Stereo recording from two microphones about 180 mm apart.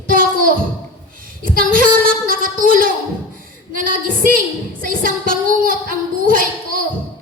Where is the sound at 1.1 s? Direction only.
50° right (ahead or behind).